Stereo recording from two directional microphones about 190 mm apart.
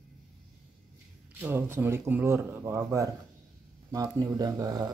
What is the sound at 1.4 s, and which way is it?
Speech, 10° right (ahead or behind).